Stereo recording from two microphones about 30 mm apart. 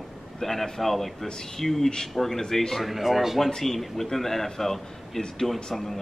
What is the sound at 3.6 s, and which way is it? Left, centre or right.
A man's voice, centre.